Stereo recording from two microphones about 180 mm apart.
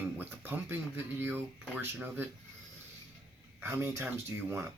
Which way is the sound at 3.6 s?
15° right (ahead or behind).